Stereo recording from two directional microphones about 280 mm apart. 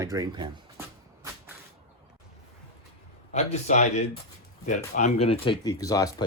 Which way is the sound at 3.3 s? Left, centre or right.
Left.